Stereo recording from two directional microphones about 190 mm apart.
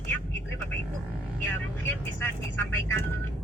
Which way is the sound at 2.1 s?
10° left (ahead or behind).